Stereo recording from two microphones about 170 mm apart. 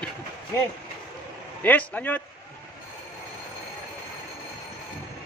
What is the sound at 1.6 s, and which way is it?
Speech, 10° left (ahead or behind).